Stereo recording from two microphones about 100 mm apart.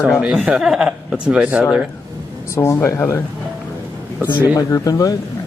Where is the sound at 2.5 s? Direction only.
25° left (ahead or behind).